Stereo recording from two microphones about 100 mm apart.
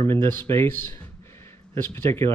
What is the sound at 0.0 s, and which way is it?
Speech, 25° left (ahead or behind).